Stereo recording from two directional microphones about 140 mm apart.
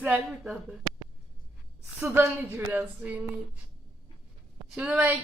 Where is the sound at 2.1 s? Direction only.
15° right (ahead or behind).